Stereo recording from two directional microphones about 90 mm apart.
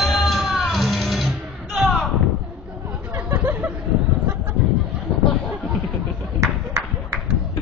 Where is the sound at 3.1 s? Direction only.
30° right (ahead or behind).